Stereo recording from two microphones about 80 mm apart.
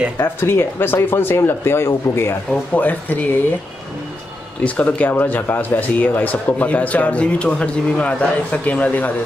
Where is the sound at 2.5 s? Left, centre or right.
Left.